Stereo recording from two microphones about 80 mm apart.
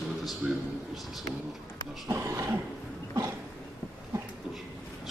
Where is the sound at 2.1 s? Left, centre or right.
Right.